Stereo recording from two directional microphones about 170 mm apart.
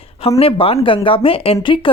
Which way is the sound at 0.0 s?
35° left (ahead or behind).